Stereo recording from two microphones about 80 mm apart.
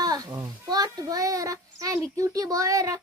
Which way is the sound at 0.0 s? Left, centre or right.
Right.